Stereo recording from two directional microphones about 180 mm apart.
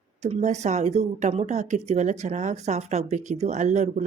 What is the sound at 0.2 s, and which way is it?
A woman's voice, 40° right (ahead or behind).